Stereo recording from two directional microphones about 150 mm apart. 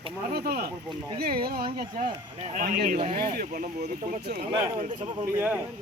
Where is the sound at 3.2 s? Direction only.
85° right; by 5.3 s 55° right (ahead or behind).